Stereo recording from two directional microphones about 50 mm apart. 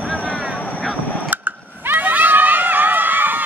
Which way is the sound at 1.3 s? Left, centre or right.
Right.